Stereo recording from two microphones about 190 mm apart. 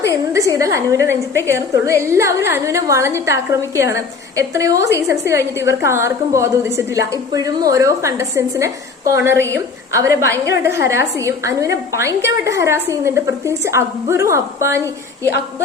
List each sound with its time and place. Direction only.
0.1 s a woman's voice: 15° right (ahead or behind)